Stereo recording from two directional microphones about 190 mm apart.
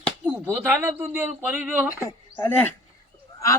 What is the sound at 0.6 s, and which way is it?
Speech, 10° right (ahead or behind).